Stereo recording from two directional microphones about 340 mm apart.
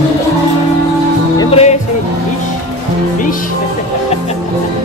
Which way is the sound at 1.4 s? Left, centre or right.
Centre.